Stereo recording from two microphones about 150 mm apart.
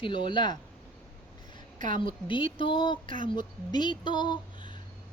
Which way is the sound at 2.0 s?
35° left (ahead or behind).